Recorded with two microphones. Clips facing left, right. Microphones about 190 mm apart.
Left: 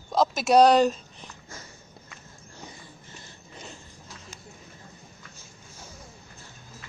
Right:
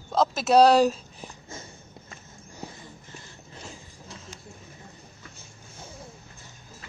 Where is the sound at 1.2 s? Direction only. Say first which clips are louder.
Right 5 dB; 30° right (ahead or behind).